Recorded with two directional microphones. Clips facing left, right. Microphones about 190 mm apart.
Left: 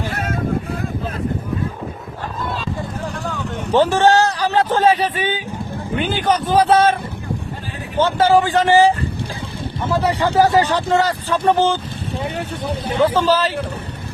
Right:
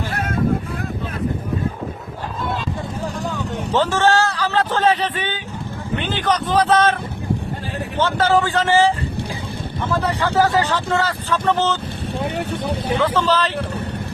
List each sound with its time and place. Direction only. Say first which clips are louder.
3.7 s a man's voice: left 4 dB; 15° left (ahead or behind)
7.9 s speech: left 3 dB; 10° left (ahead or behind)
9.9 s speech: left 3 dB; 10° left (ahead or behind)
12.3 s speech: right 1 dB; 65° right (ahead or behind)
13.1 s speech: left 3 dB; 10° left (ahead or behind)